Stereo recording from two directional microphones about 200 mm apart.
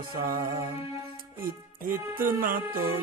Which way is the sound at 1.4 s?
45° right (ahead or behind).